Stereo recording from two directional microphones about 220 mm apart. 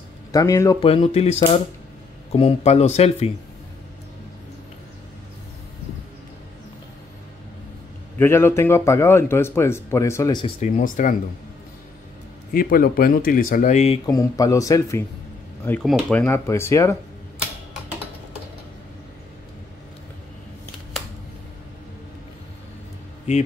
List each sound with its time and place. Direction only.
0.3 s speech: 15° left (ahead or behind)
0.7 s speech: 25° left (ahead or behind)
8.2 s speech: 10° left (ahead or behind)
10.6 s speech: 40° left (ahead or behind)
12.5 s speech: 40° left (ahead or behind)
14.0 s speech: 15° left (ahead or behind)